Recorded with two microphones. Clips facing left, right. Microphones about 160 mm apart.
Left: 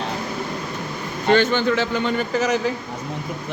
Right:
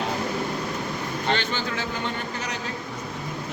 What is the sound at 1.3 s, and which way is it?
Speech, 45° left (ahead or behind).